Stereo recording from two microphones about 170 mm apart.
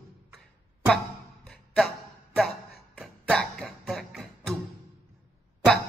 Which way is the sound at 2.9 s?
Centre (ahead or behind).